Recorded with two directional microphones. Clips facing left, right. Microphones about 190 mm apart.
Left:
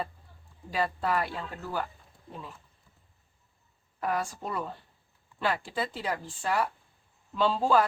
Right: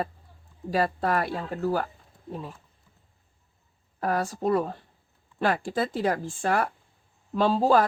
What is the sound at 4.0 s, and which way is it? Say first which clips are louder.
A woman's voice: right 4 dB; 40° right (ahead or behind).